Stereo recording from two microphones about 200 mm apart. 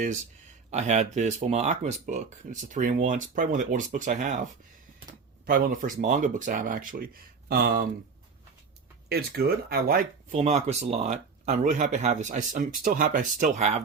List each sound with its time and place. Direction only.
0.7 s speech: 35° right (ahead or behind)
5.5 s speech: 45° right (ahead or behind)
9.0 s speech: 50° right (ahead or behind)
10.3 s speech: 30° right (ahead or behind)